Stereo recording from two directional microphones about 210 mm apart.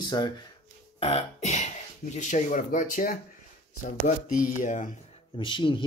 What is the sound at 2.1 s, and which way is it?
Speech, 35° left (ahead or behind).